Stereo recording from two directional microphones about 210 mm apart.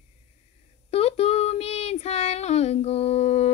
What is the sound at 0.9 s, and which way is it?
Child singing, 30° left (ahead or behind).